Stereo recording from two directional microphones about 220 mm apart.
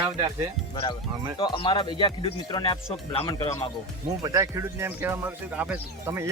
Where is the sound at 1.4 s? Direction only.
20° left (ahead or behind).